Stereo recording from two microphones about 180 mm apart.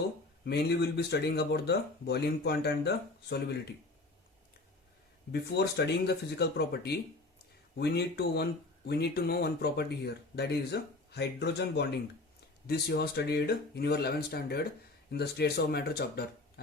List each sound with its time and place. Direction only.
0.4 s speech: 65° left (ahead or behind)
5.3 s speech: 65° left (ahead or behind)